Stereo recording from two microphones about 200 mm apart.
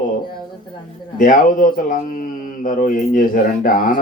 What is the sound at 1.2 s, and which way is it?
Speech, 40° left (ahead or behind).